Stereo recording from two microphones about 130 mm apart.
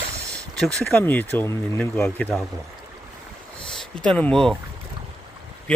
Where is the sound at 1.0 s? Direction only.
15° left (ahead or behind).